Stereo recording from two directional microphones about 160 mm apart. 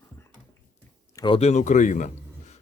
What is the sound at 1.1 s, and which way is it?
Speech, 30° left (ahead or behind).